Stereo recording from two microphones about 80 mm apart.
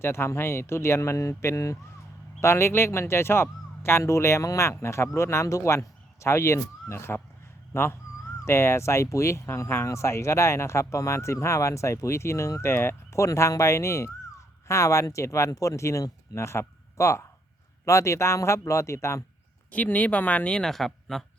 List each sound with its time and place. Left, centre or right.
0.0 s speech: left
19.7 s speech: centre